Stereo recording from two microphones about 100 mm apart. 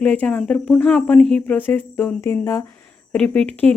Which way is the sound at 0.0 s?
10° left (ahead or behind).